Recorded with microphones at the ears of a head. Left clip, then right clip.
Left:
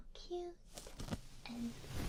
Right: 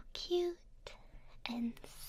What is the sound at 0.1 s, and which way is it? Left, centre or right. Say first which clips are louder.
Whispering: right 10 dB; right.